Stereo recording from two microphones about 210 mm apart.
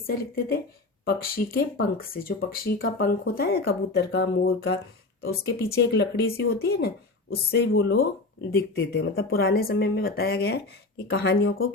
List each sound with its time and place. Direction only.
0.1 s speech: 45° left (ahead or behind); by 8.0 s 60° left (ahead or behind)
8.4 s speech: 50° left (ahead or behind)